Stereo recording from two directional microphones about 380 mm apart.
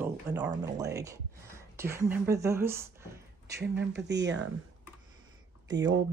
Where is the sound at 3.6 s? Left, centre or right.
Right.